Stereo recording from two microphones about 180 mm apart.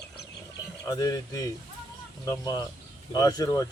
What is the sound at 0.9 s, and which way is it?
Speech, 20° left (ahead or behind).